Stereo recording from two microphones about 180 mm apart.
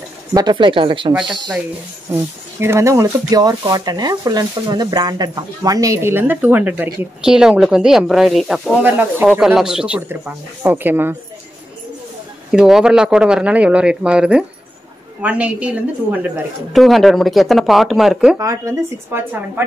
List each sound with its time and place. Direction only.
0.3 s speech: 20° right (ahead or behind)
2.6 s speech: 15° right (ahead or behind)
12.4 s speech: 5° right (ahead or behind)
18.4 s speech: 15° right (ahead or behind)